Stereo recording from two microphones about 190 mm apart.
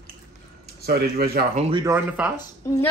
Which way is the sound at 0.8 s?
55° right (ahead or behind).